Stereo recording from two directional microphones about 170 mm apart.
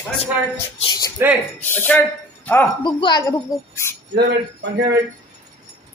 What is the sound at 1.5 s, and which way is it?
Speech, 10° left (ahead or behind).